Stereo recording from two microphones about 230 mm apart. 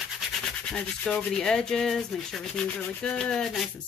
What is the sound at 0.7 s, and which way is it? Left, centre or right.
Rub, centre.